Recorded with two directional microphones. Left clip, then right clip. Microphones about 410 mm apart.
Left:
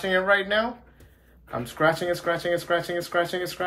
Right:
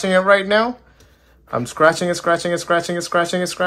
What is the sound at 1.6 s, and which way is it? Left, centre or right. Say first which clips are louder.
Speech: right 8 dB; centre.